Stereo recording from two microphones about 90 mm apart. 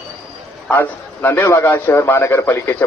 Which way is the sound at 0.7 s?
25° left (ahead or behind).